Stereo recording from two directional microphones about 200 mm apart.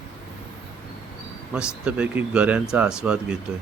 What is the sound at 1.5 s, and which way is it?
Speech, 5° right (ahead or behind).